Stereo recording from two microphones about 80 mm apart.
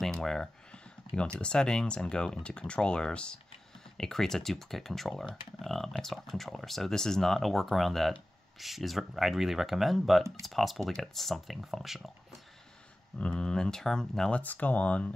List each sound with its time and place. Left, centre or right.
0.0 s computer keyboard: centre
1.4 s speech: centre
13.2 s speech: centre
14.4 s speech: left